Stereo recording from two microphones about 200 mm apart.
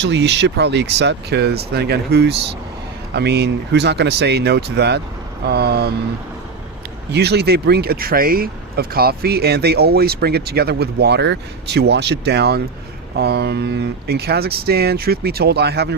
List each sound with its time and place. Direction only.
0.0 s speech: 60° right (ahead or behind)
7.1 s speech: 55° right (ahead or behind)